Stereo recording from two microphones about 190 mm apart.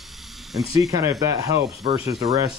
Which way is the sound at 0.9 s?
15° right (ahead or behind).